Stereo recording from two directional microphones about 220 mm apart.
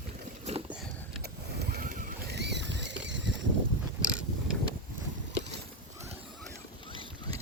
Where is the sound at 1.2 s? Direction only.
45° right (ahead or behind).